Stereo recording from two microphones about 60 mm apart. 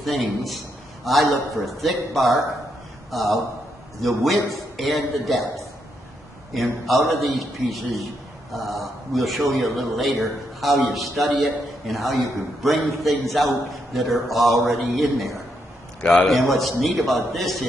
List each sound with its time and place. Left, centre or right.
0.0 s a man's voice: centre
6.5 s a man's voice: centre
16.0 s a man's voice: left
16.8 s a man's voice: centre